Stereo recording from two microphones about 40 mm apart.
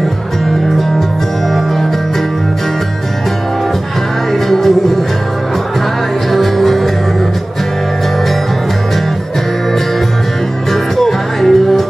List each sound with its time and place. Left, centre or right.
0.5 s music: centre
4.5 s music: centre
6.3 s music: centre
11.0 s music: centre